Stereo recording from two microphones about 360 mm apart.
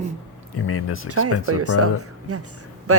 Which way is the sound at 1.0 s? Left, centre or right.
Right.